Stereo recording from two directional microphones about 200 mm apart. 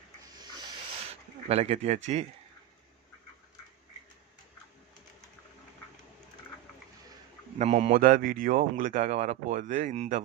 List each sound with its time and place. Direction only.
1.5 s a man's voice: 30° right (ahead or behind)
7.6 s a man's voice: 35° right (ahead or behind)